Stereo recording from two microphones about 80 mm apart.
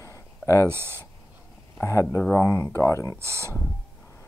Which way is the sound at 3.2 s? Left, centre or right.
Right.